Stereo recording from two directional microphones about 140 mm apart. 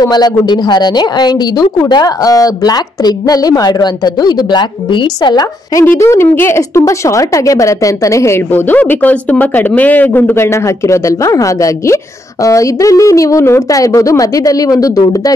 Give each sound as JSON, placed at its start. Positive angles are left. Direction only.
{"t": 0.0, "sound": "speech", "side_deg": 30}
{"t": 5.9, "sound": "speech", "side_deg": 20}